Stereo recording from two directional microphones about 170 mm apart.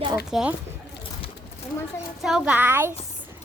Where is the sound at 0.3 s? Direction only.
5° right (ahead or behind).